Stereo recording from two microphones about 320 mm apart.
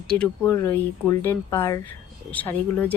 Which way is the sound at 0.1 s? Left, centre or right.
Centre.